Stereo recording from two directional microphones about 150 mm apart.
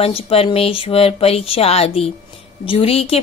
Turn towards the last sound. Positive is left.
turn(degrees=40)  # may be behind; listen again after turning